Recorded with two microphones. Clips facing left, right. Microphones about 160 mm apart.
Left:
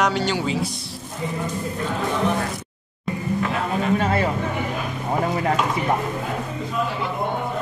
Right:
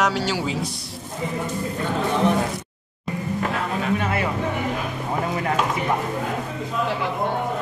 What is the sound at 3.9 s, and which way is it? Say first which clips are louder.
Speech: left 3 dB; 35° left (ahead or behind).